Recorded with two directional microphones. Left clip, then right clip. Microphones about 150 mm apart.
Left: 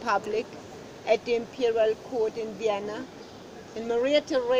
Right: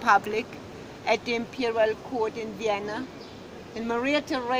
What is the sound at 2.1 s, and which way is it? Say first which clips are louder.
Speech: left 1 dB; 90° right.